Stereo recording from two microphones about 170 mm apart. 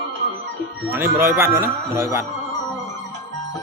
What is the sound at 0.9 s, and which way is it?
Speech, 15° right (ahead or behind).